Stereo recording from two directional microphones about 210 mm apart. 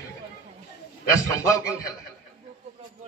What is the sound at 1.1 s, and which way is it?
Speech, 15° left (ahead or behind).